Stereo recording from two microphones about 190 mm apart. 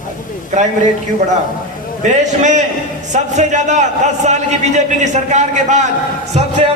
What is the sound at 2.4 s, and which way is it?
A man's voice, 40° right (ahead or behind).